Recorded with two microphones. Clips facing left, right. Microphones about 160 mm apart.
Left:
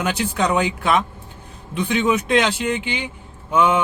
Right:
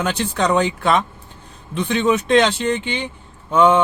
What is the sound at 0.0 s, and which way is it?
Speech, 10° left (ahead or behind).